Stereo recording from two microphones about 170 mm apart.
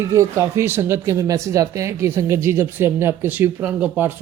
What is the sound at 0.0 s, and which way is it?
Speech, 15° right (ahead or behind).